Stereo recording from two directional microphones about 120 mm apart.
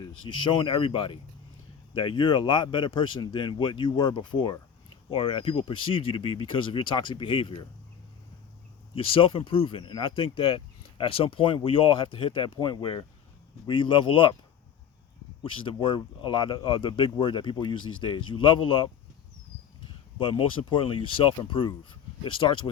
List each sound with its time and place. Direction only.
0.0 s speech: 40° left (ahead or behind)
9.0 s speech: 50° left (ahead or behind)
15.6 s speech: 40° left (ahead or behind)
20.1 s speech: 50° left (ahead or behind)